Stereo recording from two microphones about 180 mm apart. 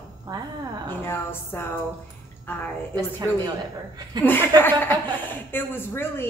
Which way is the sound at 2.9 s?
20° right (ahead or behind).